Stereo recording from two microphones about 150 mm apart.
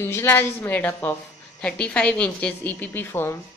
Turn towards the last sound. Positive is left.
turn(degrees=15)  # may be behind; listen again after turning